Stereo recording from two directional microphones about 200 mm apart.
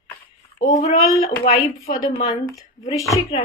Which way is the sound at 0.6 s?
40° left (ahead or behind).